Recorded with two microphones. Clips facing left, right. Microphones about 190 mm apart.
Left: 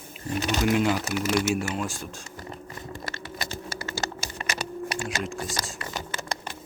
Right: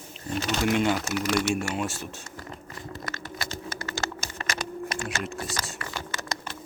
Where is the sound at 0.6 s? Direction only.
Centre (ahead or behind).